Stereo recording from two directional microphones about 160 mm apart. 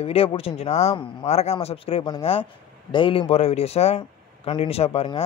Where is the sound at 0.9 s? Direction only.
30° left (ahead or behind).